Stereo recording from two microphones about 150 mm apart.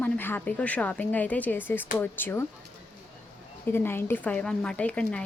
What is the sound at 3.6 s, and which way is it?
A woman's voice, 15° left (ahead or behind).